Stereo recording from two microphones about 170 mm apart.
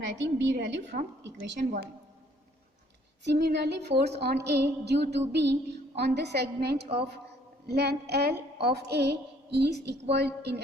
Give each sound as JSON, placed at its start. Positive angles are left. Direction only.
{"t": 0.0, "sound": "a woman's voice", "side_deg": -90}
{"t": 3.2, "sound": "a woman's voice", "side_deg": -75}
{"t": 6.8, "sound": "a woman's voice", "side_deg": -35}
{"t": 7.7, "sound": "a woman's voice", "side_deg": -75}